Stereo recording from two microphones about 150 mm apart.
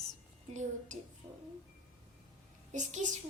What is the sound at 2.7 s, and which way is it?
Speech, 55° right (ahead or behind).